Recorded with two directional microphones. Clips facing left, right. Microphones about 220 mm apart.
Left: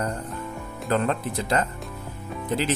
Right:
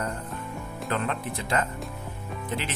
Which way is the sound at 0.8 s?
35° left (ahead or behind).